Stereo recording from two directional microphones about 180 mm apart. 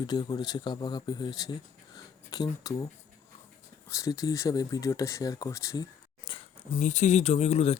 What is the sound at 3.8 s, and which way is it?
Speech, 15° left (ahead or behind).